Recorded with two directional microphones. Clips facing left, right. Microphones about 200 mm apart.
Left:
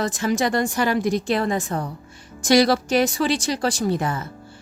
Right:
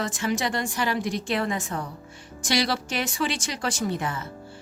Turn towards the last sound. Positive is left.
turn(degrees=40)  # may be behind; listen again after turning